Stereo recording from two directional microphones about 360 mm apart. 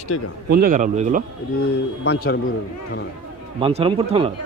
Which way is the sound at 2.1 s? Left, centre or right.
Left.